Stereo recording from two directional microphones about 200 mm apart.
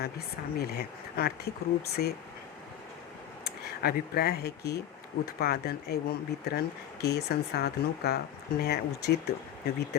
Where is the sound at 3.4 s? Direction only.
50° left (ahead or behind).